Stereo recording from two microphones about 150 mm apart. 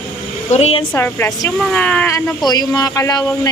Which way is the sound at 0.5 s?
45° left (ahead or behind).